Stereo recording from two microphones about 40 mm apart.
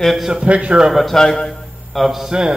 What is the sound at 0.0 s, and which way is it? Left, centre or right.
Speech, centre.